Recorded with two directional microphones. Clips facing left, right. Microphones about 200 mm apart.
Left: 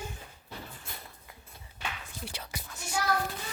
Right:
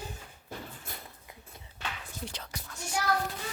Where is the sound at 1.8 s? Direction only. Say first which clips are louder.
Even; 10° left (ahead or behind).